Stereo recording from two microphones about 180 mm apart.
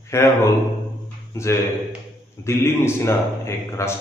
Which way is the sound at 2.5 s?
15° left (ahead or behind).